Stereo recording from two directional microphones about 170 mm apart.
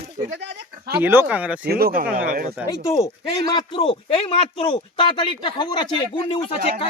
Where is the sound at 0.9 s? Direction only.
15° right (ahead or behind).